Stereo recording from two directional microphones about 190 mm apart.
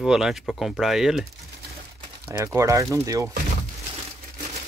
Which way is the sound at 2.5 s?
15° right (ahead or behind).